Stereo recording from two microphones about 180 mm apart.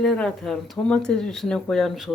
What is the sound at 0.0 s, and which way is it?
Speech, 5° left (ahead or behind).